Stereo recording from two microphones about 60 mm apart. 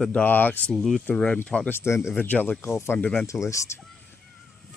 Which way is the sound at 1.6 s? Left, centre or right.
Left.